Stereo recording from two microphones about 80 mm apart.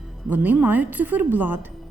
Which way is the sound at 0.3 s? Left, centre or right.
Right.